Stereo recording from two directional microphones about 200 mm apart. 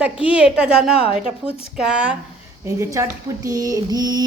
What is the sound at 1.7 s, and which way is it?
Speech, 5° right (ahead or behind).